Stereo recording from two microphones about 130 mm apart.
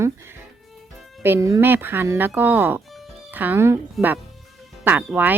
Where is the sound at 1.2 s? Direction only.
20° right (ahead or behind).